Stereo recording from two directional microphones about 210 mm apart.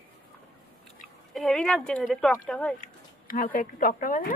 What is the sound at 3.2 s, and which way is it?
Speech, 40° left (ahead or behind).